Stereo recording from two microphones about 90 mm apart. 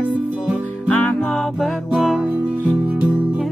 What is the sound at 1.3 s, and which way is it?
Music, centre (ahead or behind).